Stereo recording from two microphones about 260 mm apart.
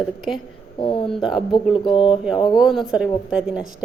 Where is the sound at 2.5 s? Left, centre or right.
Centre.